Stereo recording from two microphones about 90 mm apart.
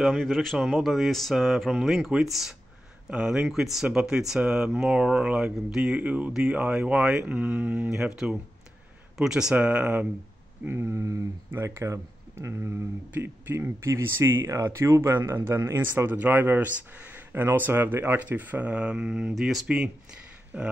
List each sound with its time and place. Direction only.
0.0 s speech: 5° left (ahead or behind); by 10.0 s 15° right (ahead or behind)
10.7 s speech: 30° right (ahead or behind)
15.8 s speech: 20° right (ahead or behind)